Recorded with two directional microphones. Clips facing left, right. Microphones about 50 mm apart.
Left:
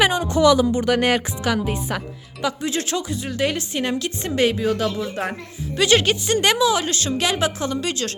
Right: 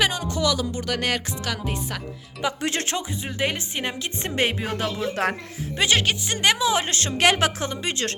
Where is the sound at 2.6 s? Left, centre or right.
Right.